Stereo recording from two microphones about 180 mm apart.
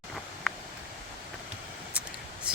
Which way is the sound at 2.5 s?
5° right (ahead or behind).